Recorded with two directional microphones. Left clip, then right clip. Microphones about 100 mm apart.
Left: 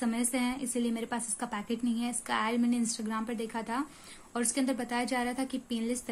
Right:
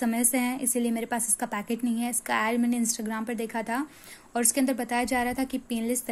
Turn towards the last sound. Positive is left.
turn(degrees=-40)  # may be behind; listen again after turning